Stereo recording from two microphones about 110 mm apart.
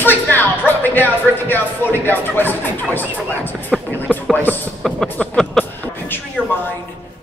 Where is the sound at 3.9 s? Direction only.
15° left (ahead or behind).